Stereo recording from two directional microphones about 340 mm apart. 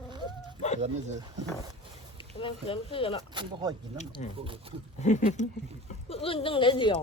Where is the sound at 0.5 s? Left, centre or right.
Centre.